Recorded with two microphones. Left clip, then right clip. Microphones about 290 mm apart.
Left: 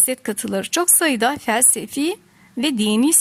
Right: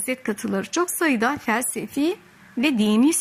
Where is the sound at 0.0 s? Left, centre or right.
Left.